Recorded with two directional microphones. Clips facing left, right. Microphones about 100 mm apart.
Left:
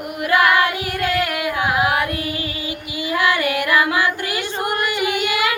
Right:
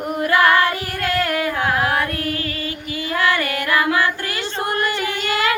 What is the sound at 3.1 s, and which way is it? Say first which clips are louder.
Music: left 1 dB; 15° left (ahead or behind).